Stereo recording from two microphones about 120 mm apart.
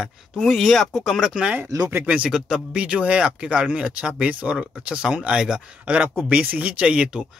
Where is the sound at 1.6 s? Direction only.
25° right (ahead or behind).